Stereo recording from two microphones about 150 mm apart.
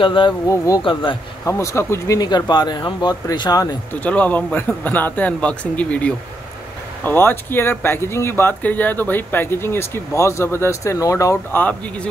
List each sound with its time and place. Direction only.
0.0 s speech: 35° left (ahead or behind)
0.5 s speech: 25° left (ahead or behind)
3.9 s speech: 10° left (ahead or behind)